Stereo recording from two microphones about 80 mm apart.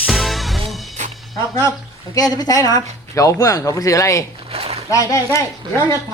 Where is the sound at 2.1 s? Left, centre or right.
Left.